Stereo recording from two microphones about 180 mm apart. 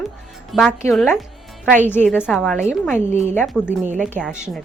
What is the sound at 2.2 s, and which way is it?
Speech, centre (ahead or behind).